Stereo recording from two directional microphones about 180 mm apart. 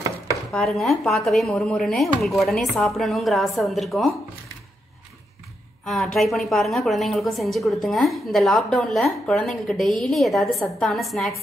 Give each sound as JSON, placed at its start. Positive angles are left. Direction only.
{"t": 0.5, "sound": "a woman's voice", "side_deg": 0}
{"t": 5.9, "sound": "a woman's voice", "side_deg": 0}